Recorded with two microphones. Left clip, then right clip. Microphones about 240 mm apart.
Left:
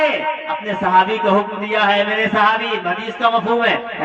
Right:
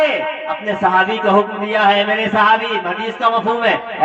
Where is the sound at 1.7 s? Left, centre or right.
Left.